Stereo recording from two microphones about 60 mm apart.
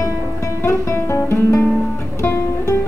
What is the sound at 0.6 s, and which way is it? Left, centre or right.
Guitar, left.